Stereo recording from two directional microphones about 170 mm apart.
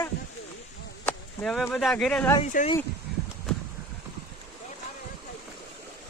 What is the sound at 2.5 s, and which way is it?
Speech, 50° left (ahead or behind).